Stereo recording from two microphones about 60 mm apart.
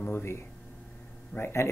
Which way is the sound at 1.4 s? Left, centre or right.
Left.